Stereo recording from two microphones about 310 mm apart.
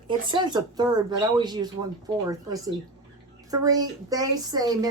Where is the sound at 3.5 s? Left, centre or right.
Centre.